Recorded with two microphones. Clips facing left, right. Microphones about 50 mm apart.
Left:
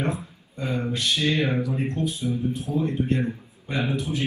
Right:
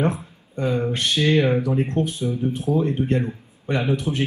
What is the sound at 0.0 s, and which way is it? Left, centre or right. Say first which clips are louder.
Speech: right 5 dB; right.